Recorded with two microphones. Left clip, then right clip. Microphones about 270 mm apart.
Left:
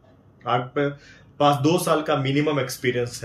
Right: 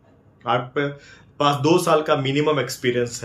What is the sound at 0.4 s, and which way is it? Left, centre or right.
Speech, centre.